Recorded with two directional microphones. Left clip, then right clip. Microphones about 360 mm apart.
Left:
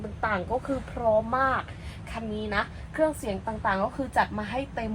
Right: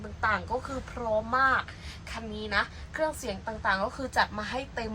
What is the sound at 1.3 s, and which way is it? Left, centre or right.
Speech, centre.